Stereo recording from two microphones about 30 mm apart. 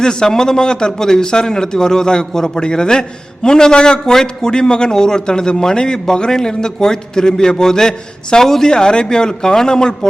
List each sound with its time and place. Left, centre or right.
0.0 s a man's voice: left
8.7 s a man's voice: left